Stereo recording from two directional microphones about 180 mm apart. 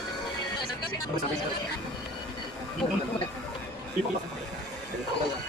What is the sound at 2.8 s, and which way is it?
Speech, 30° left (ahead or behind).